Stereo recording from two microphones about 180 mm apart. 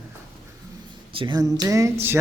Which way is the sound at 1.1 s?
25° right (ahead or behind).